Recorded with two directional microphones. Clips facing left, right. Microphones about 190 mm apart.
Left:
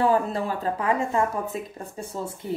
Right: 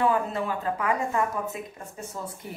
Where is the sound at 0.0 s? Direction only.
35° left (ahead or behind).